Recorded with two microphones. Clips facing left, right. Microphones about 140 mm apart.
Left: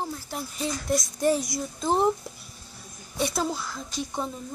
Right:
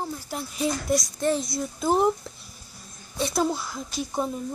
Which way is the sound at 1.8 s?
5° right (ahead or behind).